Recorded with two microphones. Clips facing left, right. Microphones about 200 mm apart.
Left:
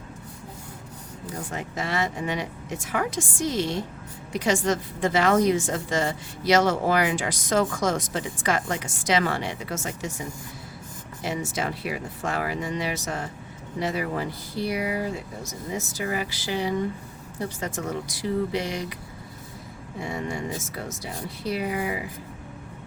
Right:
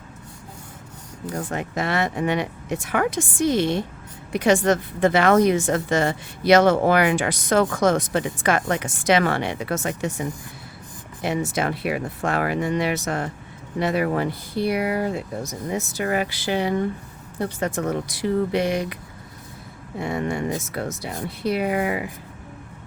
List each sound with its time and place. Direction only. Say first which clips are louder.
1.3 s speech: right 6 dB; 60° right (ahead or behind)
20.0 s speech: right 5 dB; 60° right (ahead or behind)